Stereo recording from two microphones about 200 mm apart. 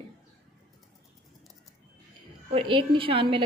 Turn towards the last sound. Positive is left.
turn(degrees=-25)  # may be behind; listen again after turning